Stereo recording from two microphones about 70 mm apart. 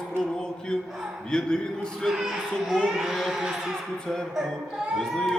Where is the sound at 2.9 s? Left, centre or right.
Centre.